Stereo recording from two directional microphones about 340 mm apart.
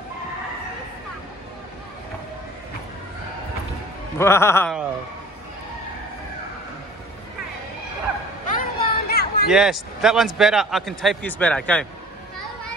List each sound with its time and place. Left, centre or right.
4.2 s a man's voice: centre
8.5 s chatter: left
9.5 s a man's voice: centre